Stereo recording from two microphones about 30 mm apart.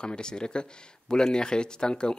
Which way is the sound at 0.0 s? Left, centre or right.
Left.